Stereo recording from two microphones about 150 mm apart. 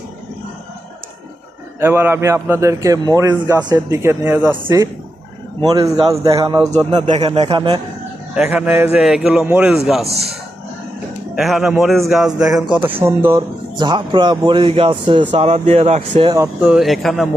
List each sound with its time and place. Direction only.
1.8 s a man's voice: 15° right (ahead or behind)
5.6 s speech: 25° right (ahead or behind)
7.1 s speech: 45° right (ahead or behind)
8.4 s a man's voice: 10° right (ahead or behind)
11.3 s a man's voice: centre (ahead or behind)
12.7 s a man's voice: 15° right (ahead or behind)
13.7 s speech: 30° right (ahead or behind)
15.3 s speech: 45° right (ahead or behind)
16.6 s a man's voice: 5° right (ahead or behind)